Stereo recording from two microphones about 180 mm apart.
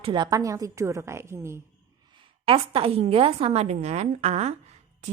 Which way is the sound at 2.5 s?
30° right (ahead or behind).